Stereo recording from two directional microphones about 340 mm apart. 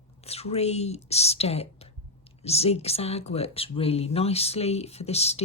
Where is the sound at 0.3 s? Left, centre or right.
Centre.